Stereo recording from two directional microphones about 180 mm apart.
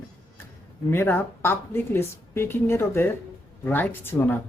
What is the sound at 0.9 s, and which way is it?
Speech, 10° left (ahead or behind).